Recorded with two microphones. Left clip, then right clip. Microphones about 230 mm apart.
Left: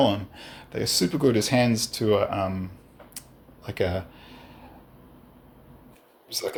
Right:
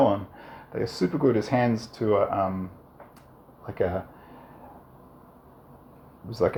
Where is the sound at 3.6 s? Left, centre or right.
Left.